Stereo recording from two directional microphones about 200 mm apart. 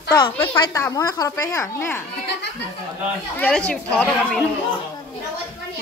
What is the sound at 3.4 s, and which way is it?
A woman's voice, 5° left (ahead or behind).